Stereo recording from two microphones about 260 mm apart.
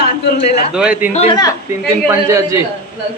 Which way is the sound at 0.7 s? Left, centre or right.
Centre.